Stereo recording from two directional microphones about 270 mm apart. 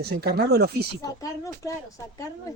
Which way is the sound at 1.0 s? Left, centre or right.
Centre.